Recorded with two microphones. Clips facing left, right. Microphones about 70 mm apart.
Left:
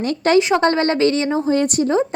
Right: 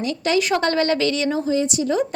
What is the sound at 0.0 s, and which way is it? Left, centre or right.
Speech, left.